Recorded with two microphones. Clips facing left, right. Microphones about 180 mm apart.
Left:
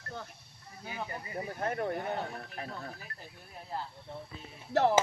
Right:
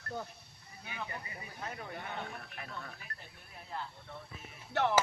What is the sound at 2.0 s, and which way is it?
Speech, 35° left (ahead or behind).